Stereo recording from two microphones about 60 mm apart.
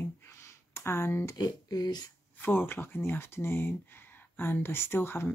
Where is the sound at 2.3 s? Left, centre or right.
Left.